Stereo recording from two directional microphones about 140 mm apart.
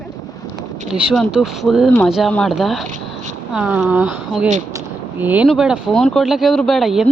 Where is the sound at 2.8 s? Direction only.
60° right (ahead or behind).